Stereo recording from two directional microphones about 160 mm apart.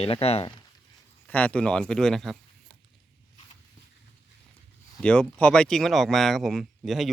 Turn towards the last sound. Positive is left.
turn(degrees=0)  # may be behind; listen again after turning